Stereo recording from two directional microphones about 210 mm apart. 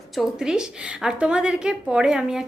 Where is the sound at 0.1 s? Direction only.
Centre (ahead or behind).